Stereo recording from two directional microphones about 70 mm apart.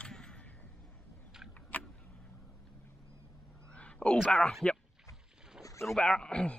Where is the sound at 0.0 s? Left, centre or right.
Centre.